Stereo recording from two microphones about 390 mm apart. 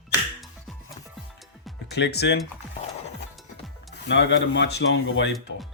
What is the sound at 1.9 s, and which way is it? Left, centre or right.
Speech, left.